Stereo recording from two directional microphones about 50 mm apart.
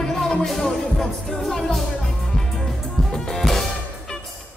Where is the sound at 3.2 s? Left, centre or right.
Centre.